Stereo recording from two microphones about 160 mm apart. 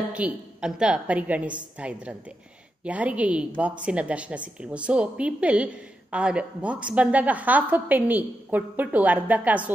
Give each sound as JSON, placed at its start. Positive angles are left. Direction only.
{"t": 0.1, "sound": "a woman's voice", "side_deg": -5}